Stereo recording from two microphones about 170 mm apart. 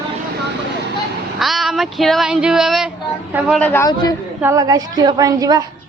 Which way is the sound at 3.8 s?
20° left (ahead or behind).